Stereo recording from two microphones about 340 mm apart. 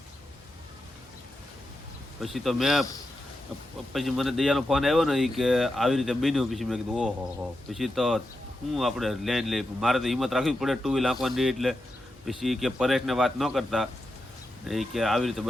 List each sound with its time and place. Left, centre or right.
2.2 s speech: centre
3.9 s speech: centre